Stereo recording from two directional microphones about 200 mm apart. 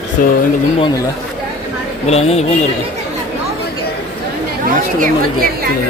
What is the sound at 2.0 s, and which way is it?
Speech, 30° left (ahead or behind).